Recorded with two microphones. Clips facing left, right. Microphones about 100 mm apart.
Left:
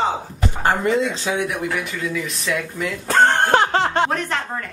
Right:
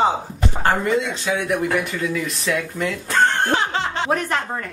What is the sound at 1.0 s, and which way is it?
Speech, 30° left (ahead or behind).